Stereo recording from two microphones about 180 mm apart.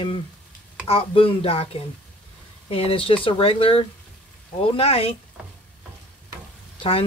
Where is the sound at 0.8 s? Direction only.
30° left (ahead or behind).